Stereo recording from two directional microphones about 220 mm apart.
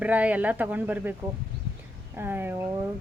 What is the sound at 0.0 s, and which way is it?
Speech, 5° right (ahead or behind).